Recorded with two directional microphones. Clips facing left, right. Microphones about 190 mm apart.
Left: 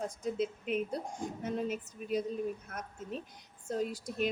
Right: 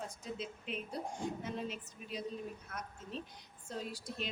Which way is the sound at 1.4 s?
50° left (ahead or behind).